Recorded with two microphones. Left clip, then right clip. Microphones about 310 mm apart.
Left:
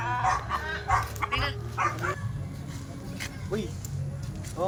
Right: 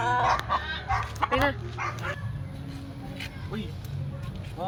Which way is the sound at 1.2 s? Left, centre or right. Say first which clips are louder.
Right 5 dB; centre.